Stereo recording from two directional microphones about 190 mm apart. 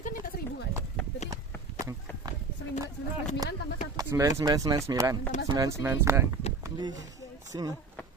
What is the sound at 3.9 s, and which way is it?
Speech, 15° right (ahead or behind).